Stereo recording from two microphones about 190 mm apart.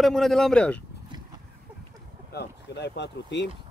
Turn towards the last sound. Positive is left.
turn(degrees=65)  # may be behind; listen again after turning